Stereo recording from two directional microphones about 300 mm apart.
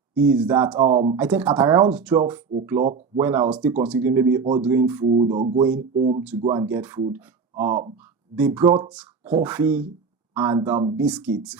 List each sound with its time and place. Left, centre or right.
0.1 s speech: centre
5.0 s speech: centre
5.5 s speech: centre
5.9 s speech: right
6.1 s speech: centre
7.7 s speech: right
8.4 s speech: centre